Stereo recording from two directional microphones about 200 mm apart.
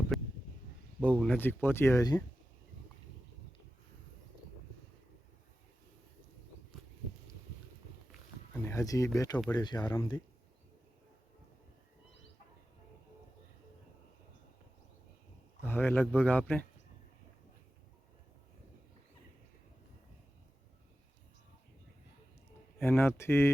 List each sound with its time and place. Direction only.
0.1 s a sound: centre (ahead or behind)
0.9 s speech: 5° left (ahead or behind)
8.5 s speech: 15° left (ahead or behind)
15.6 s speech: 10° left (ahead or behind)
22.8 s speech: 10° left (ahead or behind)